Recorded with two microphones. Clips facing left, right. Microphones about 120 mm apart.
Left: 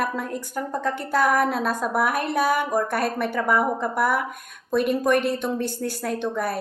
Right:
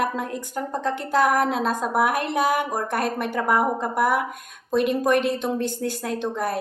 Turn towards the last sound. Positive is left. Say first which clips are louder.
# right 1 dB
turn(degrees=-20)  # may be behind; listen again after turning